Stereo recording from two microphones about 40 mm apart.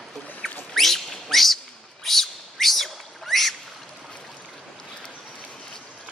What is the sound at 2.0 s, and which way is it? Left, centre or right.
Bird, centre.